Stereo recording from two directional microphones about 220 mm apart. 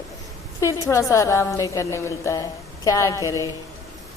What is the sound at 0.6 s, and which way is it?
A woman's voice, 15° left (ahead or behind).